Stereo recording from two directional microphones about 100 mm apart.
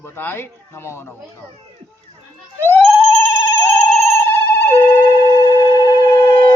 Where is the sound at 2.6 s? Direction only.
20° left (ahead or behind).